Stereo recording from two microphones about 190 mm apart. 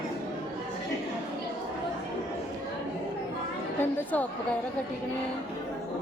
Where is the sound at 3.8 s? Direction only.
10° left (ahead or behind).